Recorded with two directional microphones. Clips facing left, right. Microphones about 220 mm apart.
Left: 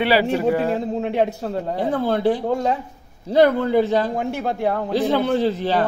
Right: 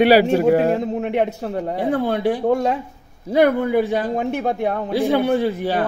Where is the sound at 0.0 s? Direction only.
45° right (ahead or behind).